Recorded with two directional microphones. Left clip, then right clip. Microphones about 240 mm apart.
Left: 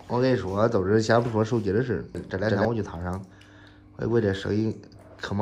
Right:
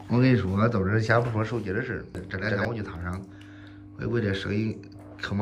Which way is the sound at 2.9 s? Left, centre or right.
Right.